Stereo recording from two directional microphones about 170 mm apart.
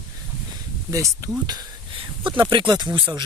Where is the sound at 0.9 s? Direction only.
20° right (ahead or behind).